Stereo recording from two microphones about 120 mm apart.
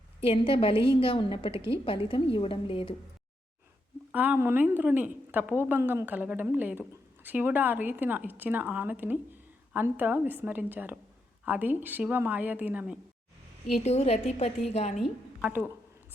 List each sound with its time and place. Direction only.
0.2 s a woman's voice: 50° left (ahead or behind)
4.1 s a woman's voice: 15° right (ahead or behind)
13.7 s a woman's voice: 65° left (ahead or behind)
15.0 s a woman's voice: 10° right (ahead or behind)